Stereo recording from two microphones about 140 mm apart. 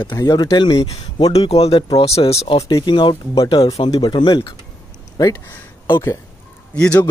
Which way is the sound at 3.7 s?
40° left (ahead or behind).